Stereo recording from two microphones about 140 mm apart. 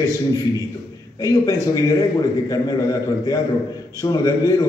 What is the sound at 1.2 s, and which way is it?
A man's voice, 25° left (ahead or behind).